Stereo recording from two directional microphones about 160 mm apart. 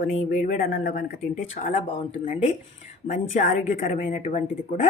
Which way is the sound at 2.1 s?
40° left (ahead or behind).